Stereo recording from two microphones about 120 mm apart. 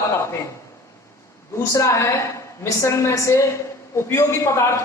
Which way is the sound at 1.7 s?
25° left (ahead or behind).